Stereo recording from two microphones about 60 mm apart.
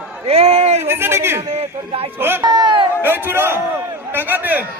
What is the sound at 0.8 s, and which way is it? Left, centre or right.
A man's voice, right.